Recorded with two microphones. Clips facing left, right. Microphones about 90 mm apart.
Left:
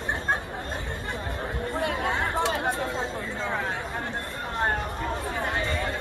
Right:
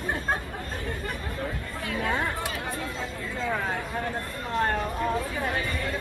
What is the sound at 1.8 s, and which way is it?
Chatter, 25° left (ahead or behind).